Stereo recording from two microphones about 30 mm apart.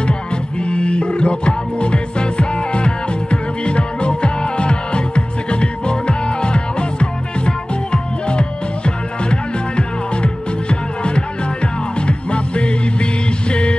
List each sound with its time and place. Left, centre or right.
0.6 s music: left